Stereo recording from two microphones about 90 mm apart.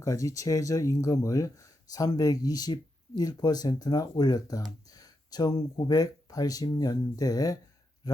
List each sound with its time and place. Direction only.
0.0 s speech: 40° left (ahead or behind)